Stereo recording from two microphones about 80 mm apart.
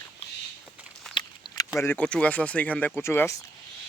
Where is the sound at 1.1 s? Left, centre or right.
Centre.